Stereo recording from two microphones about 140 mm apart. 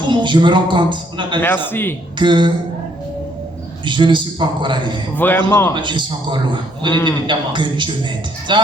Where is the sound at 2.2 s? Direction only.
35° right (ahead or behind).